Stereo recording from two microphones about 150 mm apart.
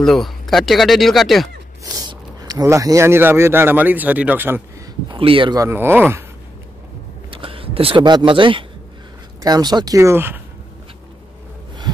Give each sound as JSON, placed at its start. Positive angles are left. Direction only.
{"t": 0.0, "sound": "speech", "side_deg": 0}
{"t": 2.0, "sound": "speech", "side_deg": -25}
{"t": 5.1, "sound": "speech", "side_deg": -35}
{"t": 5.6, "sound": "speech", "side_deg": -15}
{"t": 7.2, "sound": "speech", "side_deg": -35}